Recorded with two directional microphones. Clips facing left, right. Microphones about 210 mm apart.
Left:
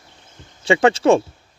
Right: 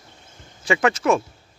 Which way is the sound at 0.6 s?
30° left (ahead or behind).